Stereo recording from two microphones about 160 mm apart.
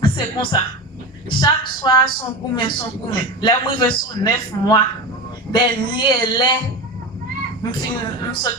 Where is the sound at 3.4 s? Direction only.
30° left (ahead or behind).